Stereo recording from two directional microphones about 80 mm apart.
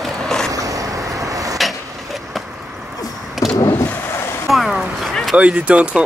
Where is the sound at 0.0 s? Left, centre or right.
Centre.